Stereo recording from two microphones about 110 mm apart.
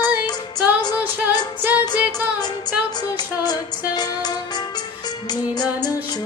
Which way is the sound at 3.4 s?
40° left (ahead or behind).